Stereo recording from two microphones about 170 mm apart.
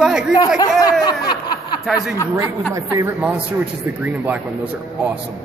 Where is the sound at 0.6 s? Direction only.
20° left (ahead or behind).